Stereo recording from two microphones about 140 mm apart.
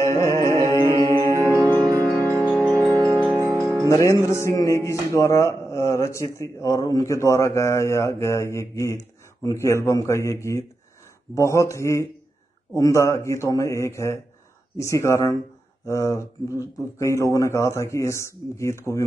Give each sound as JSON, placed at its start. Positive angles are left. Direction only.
{"t": 0.0, "sound": "music", "side_deg": 20}
{"t": 1.3, "sound": "music", "side_deg": -25}
{"t": 4.0, "sound": "speech", "side_deg": 20}